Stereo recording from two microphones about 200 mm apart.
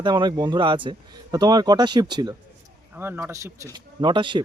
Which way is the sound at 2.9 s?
10° right (ahead or behind).